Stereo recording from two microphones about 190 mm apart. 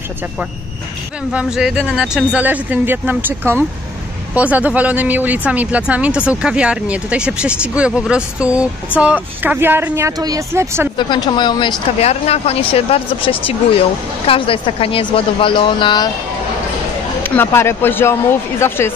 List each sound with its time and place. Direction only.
1.3 s speech: 5° right (ahead or behind)
11.0 s a woman's voice: 25° left (ahead or behind)
12.0 s a woman's voice: 35° left (ahead or behind)
17.2 s speech: 10° left (ahead or behind)